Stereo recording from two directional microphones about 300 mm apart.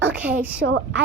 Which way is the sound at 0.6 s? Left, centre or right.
Right.